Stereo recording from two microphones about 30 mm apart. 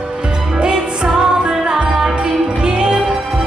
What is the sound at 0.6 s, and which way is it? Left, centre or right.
Music, right.